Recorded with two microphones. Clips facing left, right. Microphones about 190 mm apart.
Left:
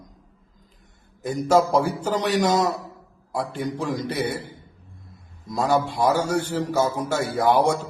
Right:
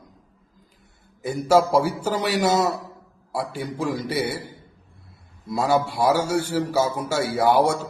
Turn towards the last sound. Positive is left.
turn(degrees=-10)  # may be behind; listen again after turning